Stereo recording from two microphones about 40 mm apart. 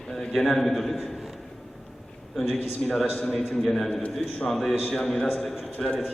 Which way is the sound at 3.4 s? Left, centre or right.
Centre.